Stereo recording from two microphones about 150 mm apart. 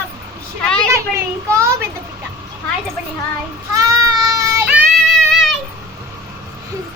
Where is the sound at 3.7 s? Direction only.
25° right (ahead or behind).